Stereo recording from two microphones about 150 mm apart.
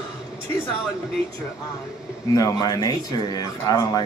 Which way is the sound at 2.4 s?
25° left (ahead or behind).